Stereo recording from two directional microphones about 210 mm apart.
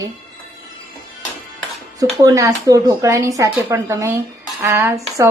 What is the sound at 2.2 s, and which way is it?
Speech, 15° right (ahead or behind).